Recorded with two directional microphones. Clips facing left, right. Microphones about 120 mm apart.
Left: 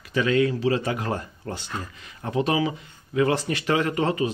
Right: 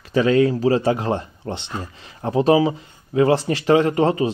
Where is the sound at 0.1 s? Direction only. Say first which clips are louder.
Right 5 dB; 35° right (ahead or behind).